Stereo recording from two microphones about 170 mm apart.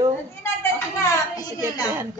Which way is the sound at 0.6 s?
15° left (ahead or behind).